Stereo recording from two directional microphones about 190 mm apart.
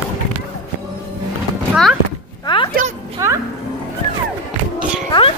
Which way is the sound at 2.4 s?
25° left (ahead or behind).